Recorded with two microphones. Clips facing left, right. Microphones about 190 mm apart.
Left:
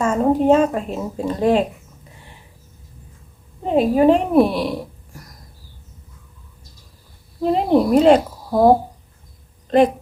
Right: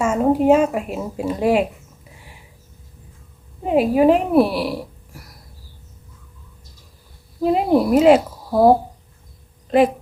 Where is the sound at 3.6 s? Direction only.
5° right (ahead or behind).